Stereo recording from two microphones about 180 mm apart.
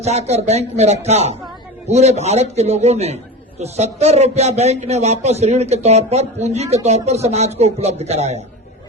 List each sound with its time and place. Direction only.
0.0 s a man's voice: 35° right (ahead or behind)